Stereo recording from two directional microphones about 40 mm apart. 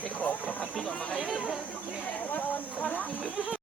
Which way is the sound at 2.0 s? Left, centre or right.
Left.